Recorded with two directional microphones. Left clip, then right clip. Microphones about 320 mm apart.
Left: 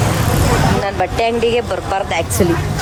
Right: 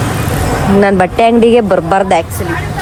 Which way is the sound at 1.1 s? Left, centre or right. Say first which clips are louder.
Right 7 dB; centre.